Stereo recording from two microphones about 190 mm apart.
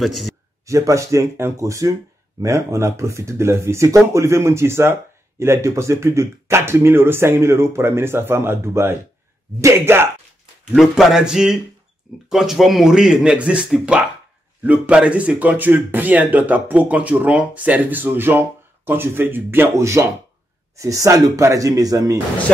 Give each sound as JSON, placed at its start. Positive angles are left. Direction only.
{"t": 0.0, "sound": "speech", "side_deg": 0}
{"t": 0.7, "sound": "speech", "side_deg": -15}
{"t": 10.7, "sound": "speech", "side_deg": 0}